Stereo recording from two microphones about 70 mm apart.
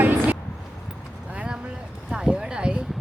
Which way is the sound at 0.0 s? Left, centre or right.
Right.